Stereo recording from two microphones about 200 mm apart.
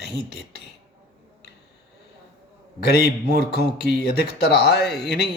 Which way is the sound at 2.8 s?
55° left (ahead or behind).